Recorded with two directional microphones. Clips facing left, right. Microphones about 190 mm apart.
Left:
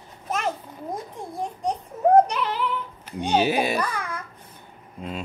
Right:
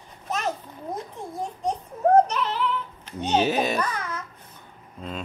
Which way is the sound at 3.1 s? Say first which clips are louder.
Left 1 dB; 10° left (ahead or behind).